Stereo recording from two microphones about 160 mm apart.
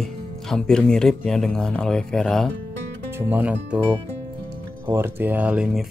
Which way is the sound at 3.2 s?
10° right (ahead or behind).